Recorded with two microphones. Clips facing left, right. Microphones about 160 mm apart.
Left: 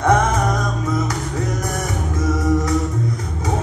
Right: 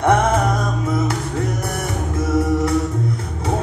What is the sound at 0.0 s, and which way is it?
Music, 30° right (ahead or behind).